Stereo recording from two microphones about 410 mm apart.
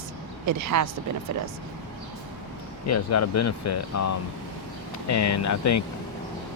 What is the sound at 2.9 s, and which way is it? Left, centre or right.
Speech, left.